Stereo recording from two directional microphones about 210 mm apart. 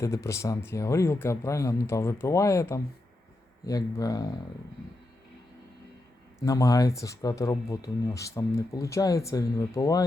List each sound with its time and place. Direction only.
0.0 s speech: 15° left (ahead or behind)
6.4 s speech: 15° left (ahead or behind)